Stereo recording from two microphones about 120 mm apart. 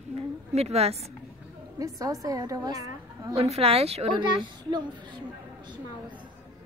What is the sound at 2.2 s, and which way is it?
A woman's voice, 30° right (ahead or behind).